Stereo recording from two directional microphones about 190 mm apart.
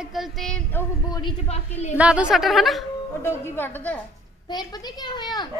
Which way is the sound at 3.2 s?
10° left (ahead or behind).